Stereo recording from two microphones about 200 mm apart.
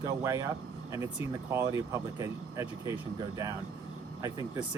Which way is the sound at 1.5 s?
15° right (ahead or behind).